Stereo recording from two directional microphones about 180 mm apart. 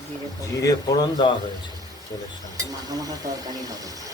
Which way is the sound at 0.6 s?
20° left (ahead or behind).